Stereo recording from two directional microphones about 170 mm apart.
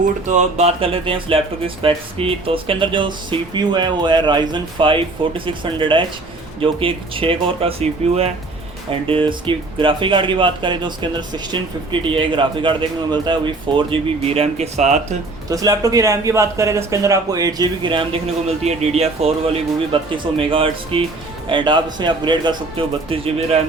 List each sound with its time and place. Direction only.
0.0 s speech: 45° right (ahead or behind)
15.4 s speech: 20° right (ahead or behind)